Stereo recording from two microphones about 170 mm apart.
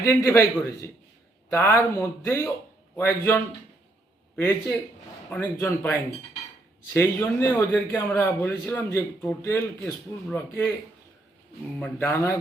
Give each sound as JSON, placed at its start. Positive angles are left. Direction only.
{"t": 0.0, "sound": "a man's voice", "side_deg": 15}
{"t": 11.8, "sound": "a man's voice", "side_deg": 15}